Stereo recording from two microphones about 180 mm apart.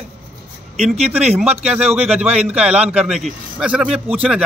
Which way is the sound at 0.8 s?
35° right (ahead or behind).